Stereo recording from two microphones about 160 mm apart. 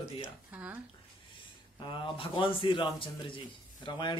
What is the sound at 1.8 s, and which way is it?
A man's voice, 30° left (ahead or behind).